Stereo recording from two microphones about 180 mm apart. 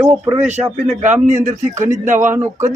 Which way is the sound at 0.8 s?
40° right (ahead or behind).